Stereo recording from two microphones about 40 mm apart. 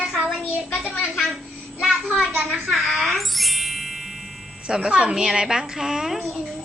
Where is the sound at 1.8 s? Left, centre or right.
Centre.